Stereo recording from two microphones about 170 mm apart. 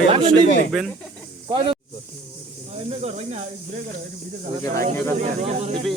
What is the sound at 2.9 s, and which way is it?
Speech, 40° right (ahead or behind).